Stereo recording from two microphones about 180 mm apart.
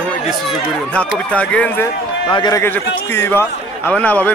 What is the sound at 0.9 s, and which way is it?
Speech, 5° left (ahead or behind).